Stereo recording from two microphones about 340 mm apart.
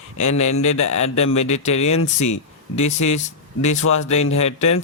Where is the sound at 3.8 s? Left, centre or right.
Left.